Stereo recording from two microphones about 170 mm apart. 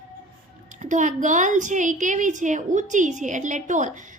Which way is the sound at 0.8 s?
45° right (ahead or behind).